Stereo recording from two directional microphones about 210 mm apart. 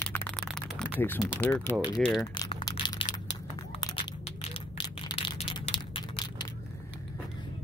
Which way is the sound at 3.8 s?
25° left (ahead or behind).